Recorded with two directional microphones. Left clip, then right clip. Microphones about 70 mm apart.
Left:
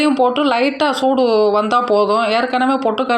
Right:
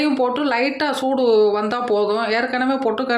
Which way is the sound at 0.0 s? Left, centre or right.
Centre.